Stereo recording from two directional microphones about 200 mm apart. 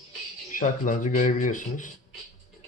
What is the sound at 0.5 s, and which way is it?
Speech, 40° left (ahead or behind).